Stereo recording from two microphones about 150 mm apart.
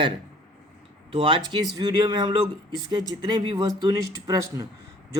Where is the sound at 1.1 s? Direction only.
35° right (ahead or behind).